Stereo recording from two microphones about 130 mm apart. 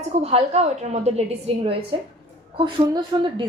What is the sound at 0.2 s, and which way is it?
A woman's voice, 50° right (ahead or behind).